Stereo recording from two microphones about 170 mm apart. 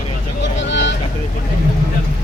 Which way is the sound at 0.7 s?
90° left.